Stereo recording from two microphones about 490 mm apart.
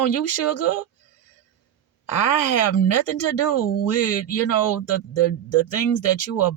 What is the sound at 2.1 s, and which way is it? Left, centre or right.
Speech, left.